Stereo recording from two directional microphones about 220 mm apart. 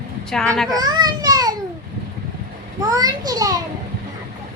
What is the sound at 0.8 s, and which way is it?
Speech, 15° right (ahead or behind).